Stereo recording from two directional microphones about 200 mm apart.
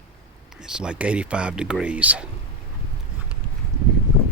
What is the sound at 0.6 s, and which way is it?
Speech, 5° right (ahead or behind).